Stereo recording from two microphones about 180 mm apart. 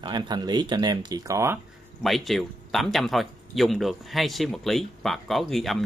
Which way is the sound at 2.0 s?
Centre (ahead or behind).